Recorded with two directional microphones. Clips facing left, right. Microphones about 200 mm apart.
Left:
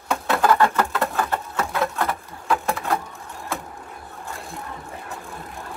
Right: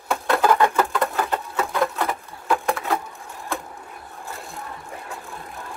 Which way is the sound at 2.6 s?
Centre (ahead or behind).